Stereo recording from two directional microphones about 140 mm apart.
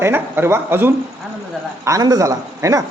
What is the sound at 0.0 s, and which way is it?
A man's voice, 15° right (ahead or behind).